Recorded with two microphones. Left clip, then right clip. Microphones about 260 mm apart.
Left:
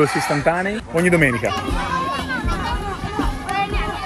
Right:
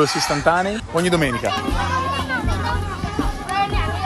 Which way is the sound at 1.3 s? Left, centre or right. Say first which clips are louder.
Even; right.